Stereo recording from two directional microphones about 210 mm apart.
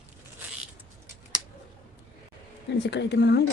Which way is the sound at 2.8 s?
55° left (ahead or behind).